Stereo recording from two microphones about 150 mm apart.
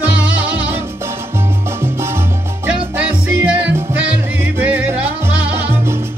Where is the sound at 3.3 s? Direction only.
15° right (ahead or behind).